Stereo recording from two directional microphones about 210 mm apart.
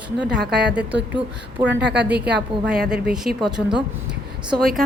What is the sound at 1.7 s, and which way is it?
Speech, 55° right (ahead or behind).